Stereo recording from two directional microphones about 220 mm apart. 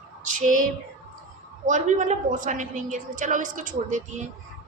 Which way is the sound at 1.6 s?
35° right (ahead or behind).